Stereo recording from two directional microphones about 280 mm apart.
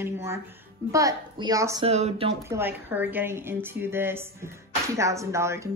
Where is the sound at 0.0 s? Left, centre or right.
Centre.